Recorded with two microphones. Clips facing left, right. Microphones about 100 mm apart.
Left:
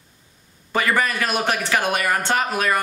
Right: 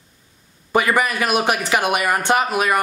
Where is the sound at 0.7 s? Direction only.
15° right (ahead or behind).